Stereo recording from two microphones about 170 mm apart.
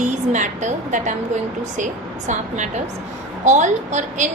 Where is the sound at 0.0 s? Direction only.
45° right (ahead or behind).